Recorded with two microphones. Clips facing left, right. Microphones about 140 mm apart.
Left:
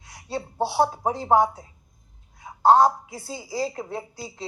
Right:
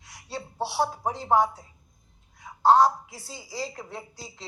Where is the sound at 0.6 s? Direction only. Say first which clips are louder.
Left 5 dB; 25° left (ahead or behind).